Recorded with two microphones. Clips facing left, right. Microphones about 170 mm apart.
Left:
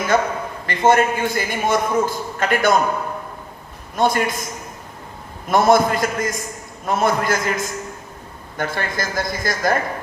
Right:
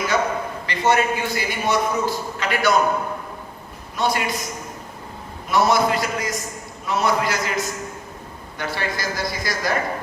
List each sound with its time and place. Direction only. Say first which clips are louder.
0.1 s a man's voice: left 4 dB; 50° left (ahead or behind)
3.9 s a man's voice: left 4 dB; 50° left (ahead or behind)
5.5 s a man's voice: left 3 dB; 50° left (ahead or behind)